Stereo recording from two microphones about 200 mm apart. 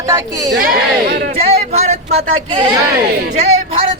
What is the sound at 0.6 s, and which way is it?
Speech, 45° right (ahead or behind).